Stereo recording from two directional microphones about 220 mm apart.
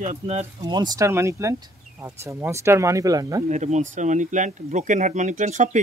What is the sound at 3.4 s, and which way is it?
Speech, 30° right (ahead or behind).